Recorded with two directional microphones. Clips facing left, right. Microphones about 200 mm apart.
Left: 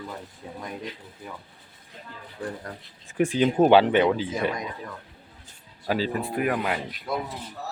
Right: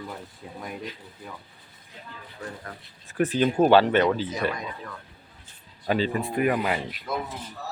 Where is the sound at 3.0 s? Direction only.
15° left (ahead or behind).